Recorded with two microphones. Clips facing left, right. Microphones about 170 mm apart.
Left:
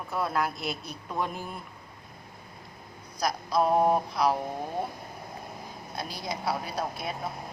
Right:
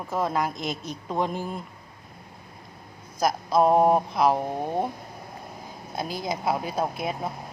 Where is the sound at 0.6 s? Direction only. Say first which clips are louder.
Right 3 dB; 90° right.